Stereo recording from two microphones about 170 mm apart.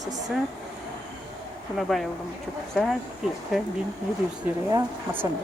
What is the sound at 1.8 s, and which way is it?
Speech, centre (ahead or behind).